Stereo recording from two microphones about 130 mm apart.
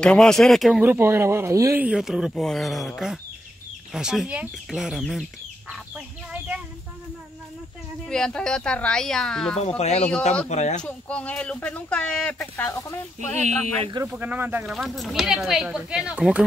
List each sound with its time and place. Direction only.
0.0 s speech: 5° left (ahead or behind)
0.8 s speech: 15° right (ahead or behind)
1.8 s speech: 5° right (ahead or behind)
3.9 s speech: 5° right (ahead or behind)
5.7 s chicken: 10° right (ahead or behind)
8.1 s speech: 5° left (ahead or behind)
9.8 s speech: 55° left (ahead or behind)
10.8 s speech: 10° left (ahead or behind)
12.7 s speech: 20° left (ahead or behind)
14.0 s speech: 10° right (ahead or behind)
14.7 s speech: centre (ahead or behind)